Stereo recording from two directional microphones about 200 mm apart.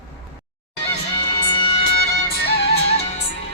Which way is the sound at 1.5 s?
25° left (ahead or behind).